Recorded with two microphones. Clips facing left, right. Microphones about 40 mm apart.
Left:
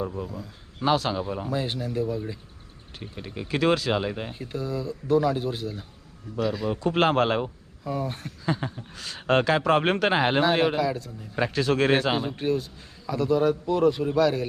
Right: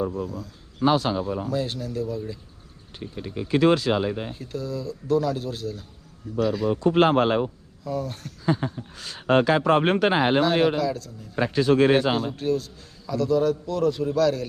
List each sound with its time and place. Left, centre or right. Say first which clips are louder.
0.2 s speech: right 3 dB; centre
0.9 s speech: right 2 dB; centre
1.1 s a man's voice: right 2 dB; centre
3.5 s speech: right 3 dB; centre
4.0 s a man's voice: right 3 dB; centre
6.3 s speech: right 3 dB; centre
7.9 s a man's voice: even; left
8.6 s speech: right 3 dB; centre
10.4 s a man's voice: right 1 dB; centre
11.5 s speech: right 4 dB; centre
12.1 s a man's voice: right 1 dB; left